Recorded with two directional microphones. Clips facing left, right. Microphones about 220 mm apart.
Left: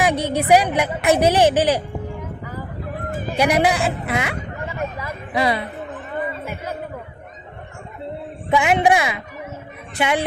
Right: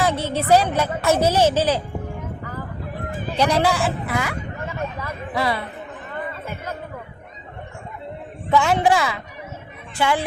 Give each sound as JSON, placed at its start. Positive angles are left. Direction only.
{"t": 0.0, "sound": "a woman's voice", "side_deg": 15}
{"t": 3.2, "sound": "a woman's voice", "side_deg": 10}
{"t": 8.4, "sound": "a woman's voice", "side_deg": 15}